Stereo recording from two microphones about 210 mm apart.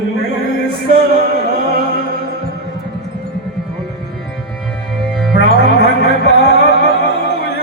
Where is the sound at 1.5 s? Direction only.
45° right (ahead or behind).